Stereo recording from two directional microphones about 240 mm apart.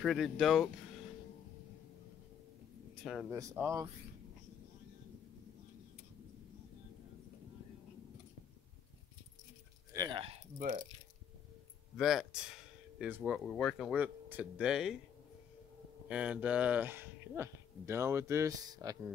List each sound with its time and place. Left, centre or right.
0.0 s speech: centre
3.0 s speech: centre
3.3 s speech: centre
9.9 s a sound: centre
12.0 s speech: centre
16.1 s speech: centre